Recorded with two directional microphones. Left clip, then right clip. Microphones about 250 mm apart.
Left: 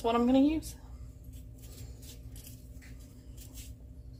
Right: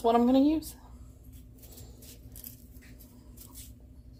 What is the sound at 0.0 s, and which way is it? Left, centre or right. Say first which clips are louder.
Speech: right 3 dB; right.